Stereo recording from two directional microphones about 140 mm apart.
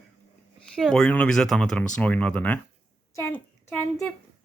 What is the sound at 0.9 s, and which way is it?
Speech, 10° left (ahead or behind).